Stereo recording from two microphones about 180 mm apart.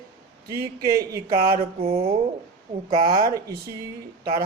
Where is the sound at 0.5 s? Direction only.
55° right (ahead or behind).